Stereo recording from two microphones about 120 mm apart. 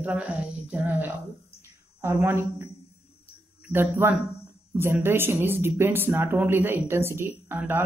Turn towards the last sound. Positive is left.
turn(degrees=-20)  # may be behind; listen again after turning